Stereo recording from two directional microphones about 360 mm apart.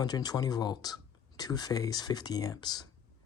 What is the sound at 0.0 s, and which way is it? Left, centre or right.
Speech, centre.